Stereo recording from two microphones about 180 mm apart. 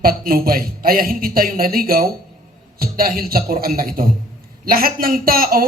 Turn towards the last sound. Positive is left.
turn(degrees=-55)  # may be behind; listen again after turning